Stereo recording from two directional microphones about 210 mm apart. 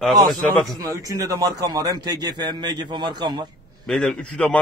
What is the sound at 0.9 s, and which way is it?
A man's voice, 15° right (ahead or behind).